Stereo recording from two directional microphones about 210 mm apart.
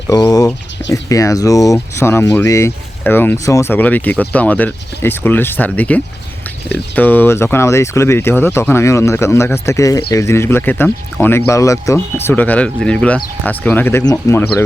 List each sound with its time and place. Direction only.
0.1 s speech: 15° left (ahead or behind)